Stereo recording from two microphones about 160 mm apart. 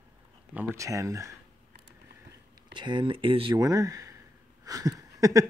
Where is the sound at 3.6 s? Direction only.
20° right (ahead or behind).